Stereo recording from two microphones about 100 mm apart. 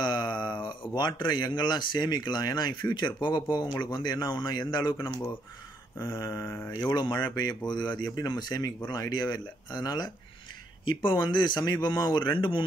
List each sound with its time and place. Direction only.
0.0 s speech: 50° left (ahead or behind)
6.0 s mantra: 30° left (ahead or behind)
6.7 s speech: 45° left (ahead or behind)